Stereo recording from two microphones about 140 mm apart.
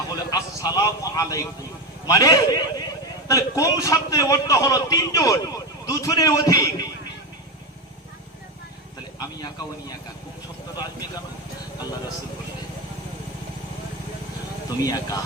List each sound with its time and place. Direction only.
0.1 s a man's voice: 25° left (ahead or behind)
9.1 s speech: 30° left (ahead or behind)
14.8 s a man's voice: 25° left (ahead or behind)